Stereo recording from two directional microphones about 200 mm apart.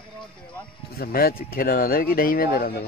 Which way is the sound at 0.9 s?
50° left (ahead or behind).